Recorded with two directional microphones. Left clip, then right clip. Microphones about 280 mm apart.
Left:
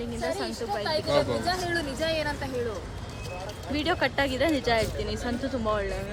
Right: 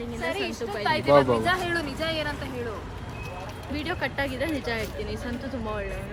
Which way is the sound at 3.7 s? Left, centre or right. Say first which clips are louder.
Left 4 dB; centre.